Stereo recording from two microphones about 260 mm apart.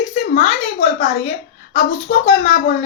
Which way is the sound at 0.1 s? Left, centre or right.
Left.